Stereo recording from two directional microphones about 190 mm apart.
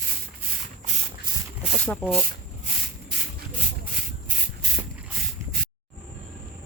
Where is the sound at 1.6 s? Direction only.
Centre (ahead or behind).